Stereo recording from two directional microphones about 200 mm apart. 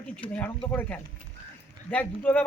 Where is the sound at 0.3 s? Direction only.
10° left (ahead or behind).